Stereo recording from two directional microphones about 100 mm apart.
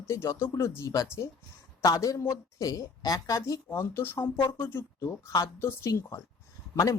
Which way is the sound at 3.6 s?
25° left (ahead or behind).